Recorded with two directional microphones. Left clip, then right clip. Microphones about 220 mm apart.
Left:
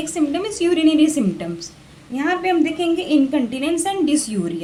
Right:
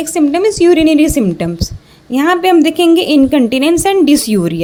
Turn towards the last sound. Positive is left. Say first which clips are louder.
# right 9 dB
turn(degrees=-40)  # may be behind; listen again after turning